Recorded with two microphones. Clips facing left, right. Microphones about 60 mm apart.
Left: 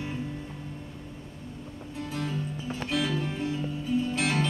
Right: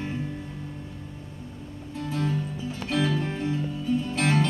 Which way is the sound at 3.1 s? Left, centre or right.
Centre.